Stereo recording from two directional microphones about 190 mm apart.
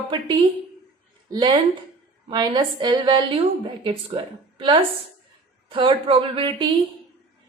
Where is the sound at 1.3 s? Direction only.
25° right (ahead or behind).